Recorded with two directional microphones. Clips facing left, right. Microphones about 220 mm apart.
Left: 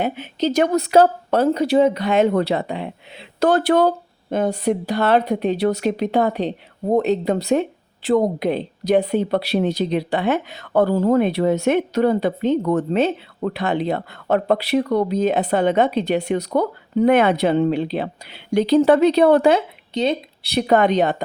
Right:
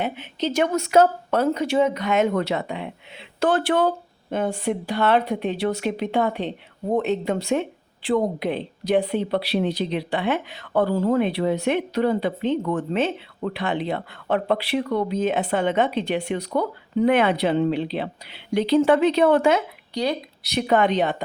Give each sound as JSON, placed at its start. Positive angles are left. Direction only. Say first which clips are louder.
{"t": 0.0, "sound": "speech", "louder": "left 4 dB", "side_deg": 40}